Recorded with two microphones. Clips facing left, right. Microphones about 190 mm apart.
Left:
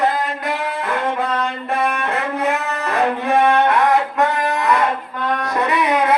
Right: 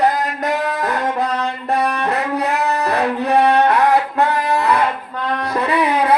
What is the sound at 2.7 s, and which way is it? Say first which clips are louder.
Music: right 1 dB; 35° right (ahead or behind).